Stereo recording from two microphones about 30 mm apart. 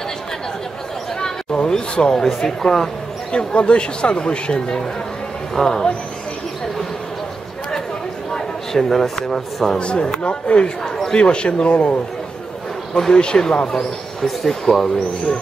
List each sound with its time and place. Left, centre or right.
1.7 s a sound: left
2.1 s speech: centre
3.3 s speech: left
5.5 s speech: centre
8.3 s speech: centre
9.8 s speech: left
10.8 s a sound: centre
11.1 s speech: left
13.1 s speech: left
14.2 s speech: centre